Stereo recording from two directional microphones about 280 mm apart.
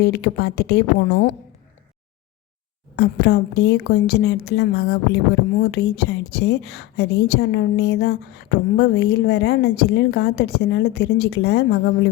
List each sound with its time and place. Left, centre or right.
0.0 s a woman's voice: left
2.9 s a woman's voice: left